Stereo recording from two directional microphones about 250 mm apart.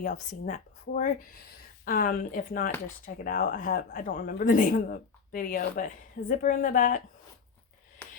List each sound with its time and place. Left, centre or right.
0.0 s speech: left